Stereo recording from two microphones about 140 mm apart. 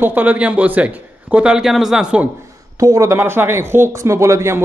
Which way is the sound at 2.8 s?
20° right (ahead or behind).